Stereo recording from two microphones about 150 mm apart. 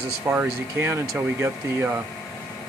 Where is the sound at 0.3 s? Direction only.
15° right (ahead or behind).